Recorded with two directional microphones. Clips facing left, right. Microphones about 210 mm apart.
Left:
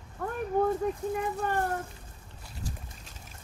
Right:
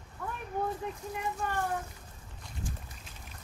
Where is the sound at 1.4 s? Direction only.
50° left (ahead or behind).